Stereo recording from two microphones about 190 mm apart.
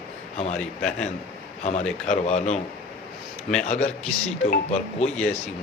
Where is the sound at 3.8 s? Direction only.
5° left (ahead or behind).